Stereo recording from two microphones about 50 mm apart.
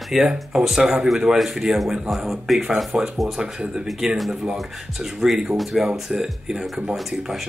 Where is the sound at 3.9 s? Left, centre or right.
Centre.